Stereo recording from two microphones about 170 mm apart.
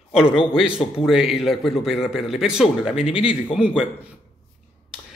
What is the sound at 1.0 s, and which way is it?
A man's voice, 5° right (ahead or behind).